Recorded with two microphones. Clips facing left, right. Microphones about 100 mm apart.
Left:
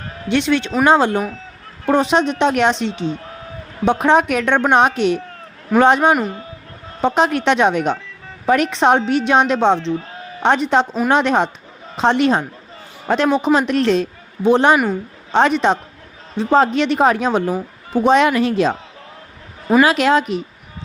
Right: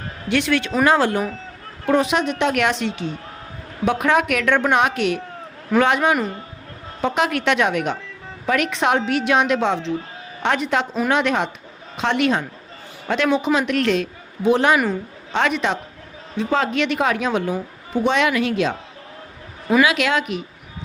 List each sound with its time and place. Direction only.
0.3 s a woman's voice: 25° left (ahead or behind)
19.8 s a woman's voice: 35° left (ahead or behind)